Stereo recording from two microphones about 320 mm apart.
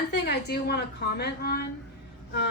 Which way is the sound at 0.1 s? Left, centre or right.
Left.